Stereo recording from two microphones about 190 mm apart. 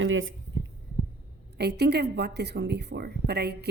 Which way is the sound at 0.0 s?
90° right.